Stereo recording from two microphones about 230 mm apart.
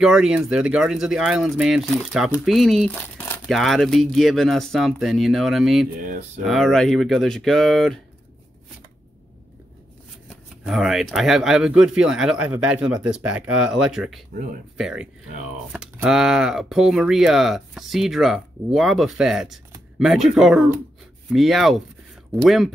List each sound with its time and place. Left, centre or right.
0.0 s speech: centre
6.0 s speech: right
6.4 s speech: centre
10.7 s speech: centre